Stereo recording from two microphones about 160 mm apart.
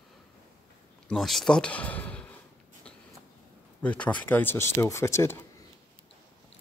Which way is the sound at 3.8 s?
10° left (ahead or behind).